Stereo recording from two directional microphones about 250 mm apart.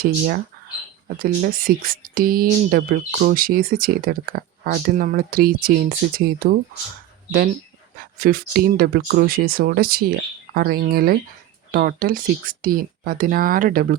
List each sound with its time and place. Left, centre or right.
1.2 s speech: right
7.9 s speech: right